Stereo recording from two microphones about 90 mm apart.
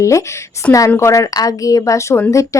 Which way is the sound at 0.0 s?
35° left (ahead or behind).